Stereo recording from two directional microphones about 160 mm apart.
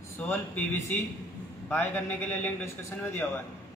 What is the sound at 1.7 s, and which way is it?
A man's voice, 10° left (ahead or behind).